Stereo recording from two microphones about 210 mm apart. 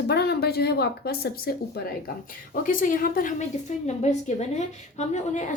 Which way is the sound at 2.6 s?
40° left (ahead or behind).